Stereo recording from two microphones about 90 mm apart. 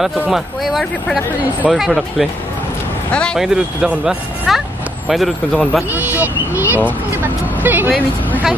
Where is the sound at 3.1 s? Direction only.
10° left (ahead or behind).